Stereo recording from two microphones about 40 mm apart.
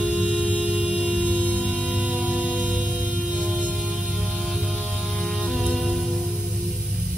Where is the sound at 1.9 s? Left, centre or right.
Right.